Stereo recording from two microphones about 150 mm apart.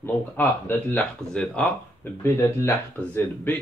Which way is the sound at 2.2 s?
15° left (ahead or behind).